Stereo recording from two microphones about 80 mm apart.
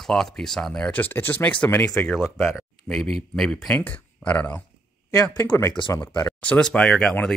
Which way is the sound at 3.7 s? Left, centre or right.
Centre.